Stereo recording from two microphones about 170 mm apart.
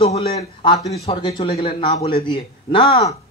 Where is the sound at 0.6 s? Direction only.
30° left (ahead or behind).